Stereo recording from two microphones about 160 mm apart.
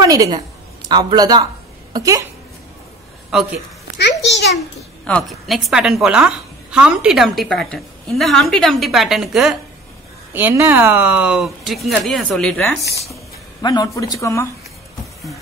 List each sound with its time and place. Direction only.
0.0 s speech: 25° right (ahead or behind)
3.3 s a woman's voice: 5° right (ahead or behind)
4.2 s a child's voice: 90° left
5.0 s a woman's voice: 5° left (ahead or behind)
10.3 s a woman's voice: 15° right (ahead or behind); by 12.7 s 5° left (ahead or behind)
13.1 s speech: 25° left (ahead or behind)